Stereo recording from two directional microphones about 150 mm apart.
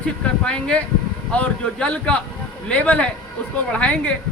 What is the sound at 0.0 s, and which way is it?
Speech, 5° left (ahead or behind).